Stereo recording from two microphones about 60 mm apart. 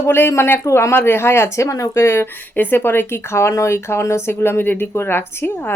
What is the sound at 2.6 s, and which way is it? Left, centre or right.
Speech, left.